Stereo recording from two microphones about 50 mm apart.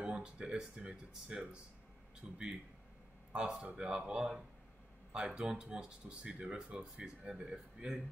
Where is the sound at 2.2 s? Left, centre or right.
Centre.